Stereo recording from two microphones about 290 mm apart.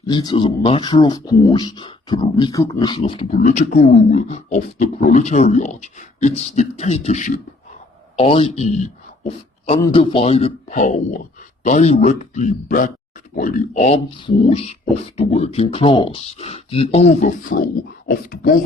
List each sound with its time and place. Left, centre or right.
0.0 s speech: centre; by 18.5 s left